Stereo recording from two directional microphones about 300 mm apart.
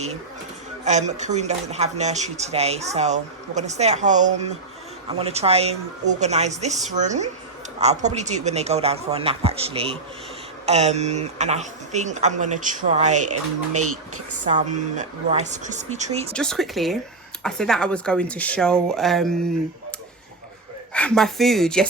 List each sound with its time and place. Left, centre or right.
0.9 s speech: right
13.2 s speech: right
14.5 s speech: right
16.3 s speech: centre
20.9 s speech: centre